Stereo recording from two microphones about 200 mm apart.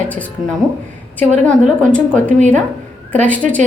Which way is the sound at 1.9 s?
5° left (ahead or behind).